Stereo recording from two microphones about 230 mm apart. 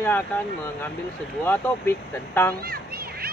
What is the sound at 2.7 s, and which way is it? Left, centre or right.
Children playing, right.